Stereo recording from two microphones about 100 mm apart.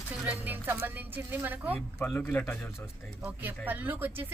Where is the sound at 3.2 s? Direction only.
20° right (ahead or behind).